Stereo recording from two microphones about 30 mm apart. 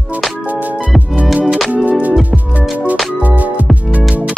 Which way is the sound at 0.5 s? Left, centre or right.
Right.